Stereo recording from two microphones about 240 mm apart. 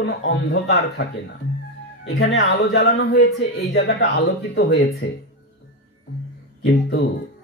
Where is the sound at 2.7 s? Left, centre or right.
Left.